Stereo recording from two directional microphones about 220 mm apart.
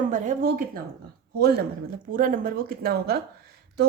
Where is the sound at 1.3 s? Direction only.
45° right (ahead or behind).